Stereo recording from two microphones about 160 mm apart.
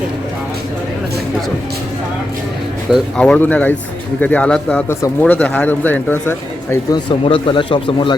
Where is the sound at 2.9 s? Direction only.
5° left (ahead or behind).